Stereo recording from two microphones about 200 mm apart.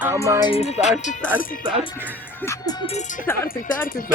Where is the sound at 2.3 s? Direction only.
15° left (ahead or behind).